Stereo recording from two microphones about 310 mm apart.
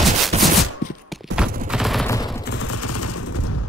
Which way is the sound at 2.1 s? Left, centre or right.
Centre.